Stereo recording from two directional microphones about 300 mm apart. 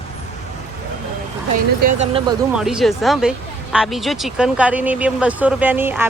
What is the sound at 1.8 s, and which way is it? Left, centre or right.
Speech, right.